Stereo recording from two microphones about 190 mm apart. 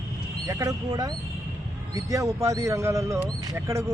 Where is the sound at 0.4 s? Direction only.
20° right (ahead or behind).